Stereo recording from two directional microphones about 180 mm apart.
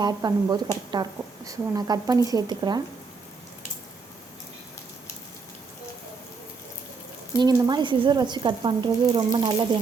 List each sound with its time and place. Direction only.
0.0 s speech: 20° right (ahead or behind)
7.3 s speech: 25° right (ahead or behind)